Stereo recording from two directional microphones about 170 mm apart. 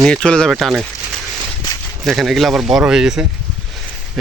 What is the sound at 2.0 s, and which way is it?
Speech, centre (ahead or behind).